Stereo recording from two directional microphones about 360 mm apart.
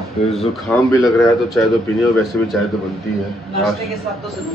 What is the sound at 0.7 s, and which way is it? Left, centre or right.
Speech, centre.